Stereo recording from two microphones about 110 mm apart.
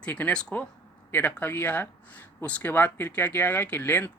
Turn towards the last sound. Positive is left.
turn(degrees=20)  # may be behind; listen again after turning